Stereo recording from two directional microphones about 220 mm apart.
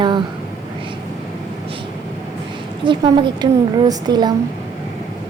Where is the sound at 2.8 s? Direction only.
20° right (ahead or behind).